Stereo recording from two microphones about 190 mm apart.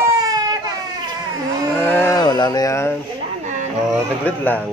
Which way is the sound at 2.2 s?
20° left (ahead or behind).